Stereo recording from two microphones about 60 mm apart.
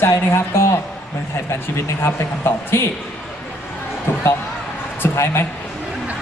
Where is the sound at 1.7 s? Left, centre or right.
Left.